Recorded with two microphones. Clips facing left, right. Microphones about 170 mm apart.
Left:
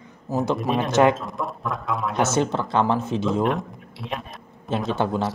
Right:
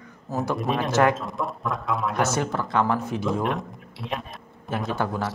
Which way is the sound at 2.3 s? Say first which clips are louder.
Left 3 dB; 25° left (ahead or behind).